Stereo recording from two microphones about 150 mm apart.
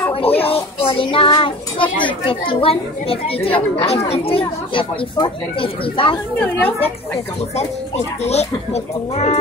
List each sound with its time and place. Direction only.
0.1 s a child's voice: 40° left (ahead or behind)
8.2 s speech: 45° left (ahead or behind)